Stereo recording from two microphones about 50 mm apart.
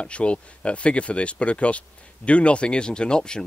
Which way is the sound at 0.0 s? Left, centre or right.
Left.